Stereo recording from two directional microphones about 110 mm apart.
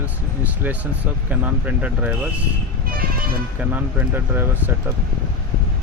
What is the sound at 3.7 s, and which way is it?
Speech, 20° right (ahead or behind).